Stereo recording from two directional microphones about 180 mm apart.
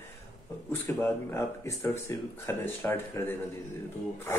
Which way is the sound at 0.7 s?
10° left (ahead or behind).